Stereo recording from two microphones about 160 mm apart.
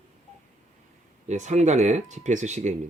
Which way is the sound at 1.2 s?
45° right (ahead or behind).